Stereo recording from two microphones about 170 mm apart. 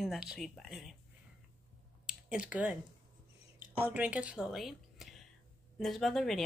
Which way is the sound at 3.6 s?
10° right (ahead or behind).